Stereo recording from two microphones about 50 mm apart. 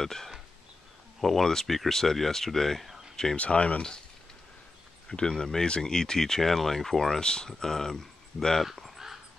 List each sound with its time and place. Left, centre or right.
0.0 s speech: centre
3.3 s speech: left
5.0 s speech: centre
8.6 s a sound: centre